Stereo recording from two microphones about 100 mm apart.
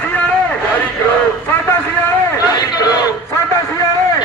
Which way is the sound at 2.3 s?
40° left (ahead or behind).